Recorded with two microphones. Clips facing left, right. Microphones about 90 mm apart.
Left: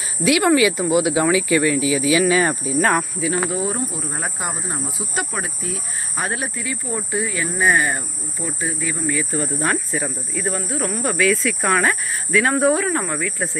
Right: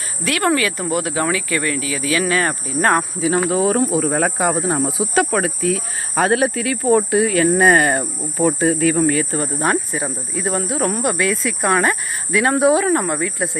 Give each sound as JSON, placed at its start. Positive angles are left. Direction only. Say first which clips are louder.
{"t": 0.3, "sound": "speech", "louder": "left 3 dB", "side_deg": 5}
{"t": 3.2, "sound": "speech", "louder": "right 4 dB", "side_deg": -35}
{"t": 3.5, "sound": "speech", "louder": "right 8 dB", "side_deg": -90}
{"t": 8.5, "sound": "speech", "louder": "right 10 dB", "side_deg": -90}
{"t": 9.6, "sound": "speech", "louder": "right 3 dB", "side_deg": -15}
{"t": 10.8, "sound": "speech", "louder": "right 4 dB", "side_deg": -40}
{"t": 11.0, "sound": "speech", "louder": "even", "side_deg": -5}